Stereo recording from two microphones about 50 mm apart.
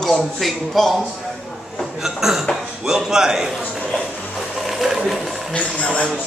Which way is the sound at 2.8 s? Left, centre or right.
Centre.